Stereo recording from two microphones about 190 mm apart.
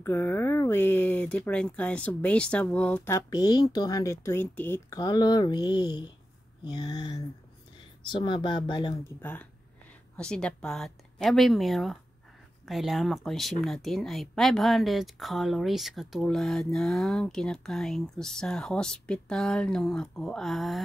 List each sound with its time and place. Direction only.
0.0 s speech: 10° left (ahead or behind)
9.2 s speech: 10° left (ahead or behind)